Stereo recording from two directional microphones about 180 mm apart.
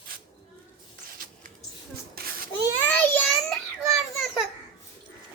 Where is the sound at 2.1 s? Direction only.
55° right (ahead or behind).